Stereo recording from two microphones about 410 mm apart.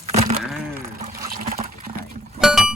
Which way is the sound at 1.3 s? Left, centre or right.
Right.